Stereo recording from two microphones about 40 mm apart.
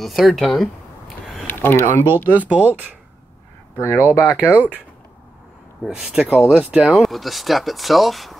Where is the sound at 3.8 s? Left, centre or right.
Left.